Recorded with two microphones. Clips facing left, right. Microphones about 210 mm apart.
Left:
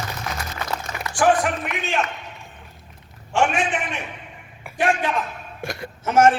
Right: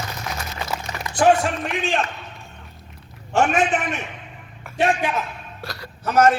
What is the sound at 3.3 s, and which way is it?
Speech, 40° right (ahead or behind).